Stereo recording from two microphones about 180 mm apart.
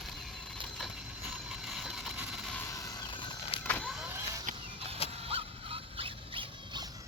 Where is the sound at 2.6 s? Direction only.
15° left (ahead or behind).